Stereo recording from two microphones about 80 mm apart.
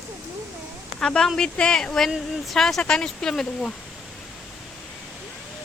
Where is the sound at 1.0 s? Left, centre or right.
Centre.